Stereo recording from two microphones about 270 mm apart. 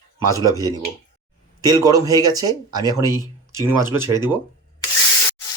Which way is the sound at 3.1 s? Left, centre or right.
Centre.